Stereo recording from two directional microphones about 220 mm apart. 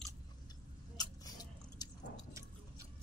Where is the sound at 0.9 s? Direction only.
15° left (ahead or behind).